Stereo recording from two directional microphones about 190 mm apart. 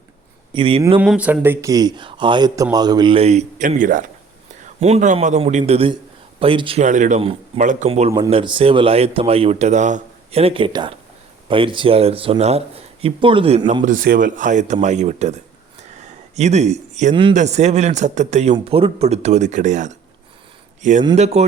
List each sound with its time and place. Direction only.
0.5 s speech: 25° right (ahead or behind)
0.9 s a man's voice: 5° right (ahead or behind); by 13.8 s 30° right (ahead or behind)
13.8 s speech: 45° right (ahead or behind)